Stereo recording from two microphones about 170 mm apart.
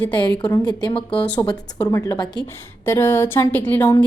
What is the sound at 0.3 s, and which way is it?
Speech, 20° left (ahead or behind).